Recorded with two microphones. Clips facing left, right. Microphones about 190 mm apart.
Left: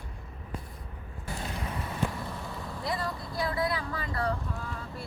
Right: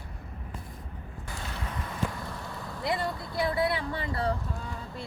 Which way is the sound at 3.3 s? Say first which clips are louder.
Right 3 dB; 25° right (ahead or behind).